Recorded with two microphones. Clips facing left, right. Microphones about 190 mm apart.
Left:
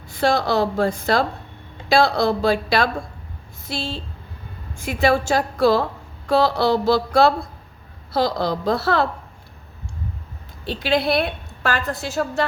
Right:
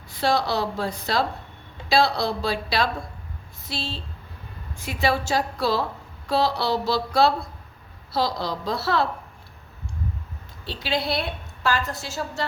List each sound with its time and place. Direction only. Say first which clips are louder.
0.1 s speech: left 4 dB; 50° left (ahead or behind)
10.7 s a woman's voice: left 6 dB; 55° left (ahead or behind)